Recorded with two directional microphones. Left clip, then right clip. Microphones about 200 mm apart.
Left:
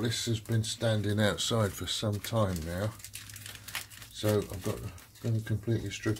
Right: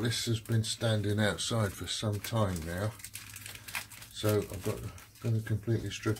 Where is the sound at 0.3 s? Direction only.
15° left (ahead or behind).